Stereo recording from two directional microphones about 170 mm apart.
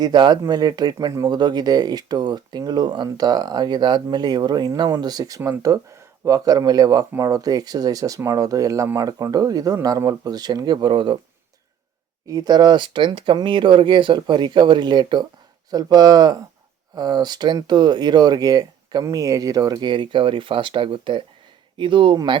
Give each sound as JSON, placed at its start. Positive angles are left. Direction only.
{"t": 0.0, "sound": "speech", "side_deg": -25}
{"t": 12.3, "sound": "speech", "side_deg": -25}